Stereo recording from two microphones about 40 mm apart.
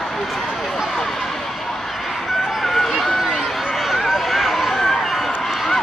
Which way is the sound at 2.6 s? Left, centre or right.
Centre.